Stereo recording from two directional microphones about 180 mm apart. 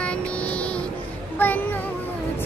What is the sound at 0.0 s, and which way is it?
Music, 5° left (ahead or behind).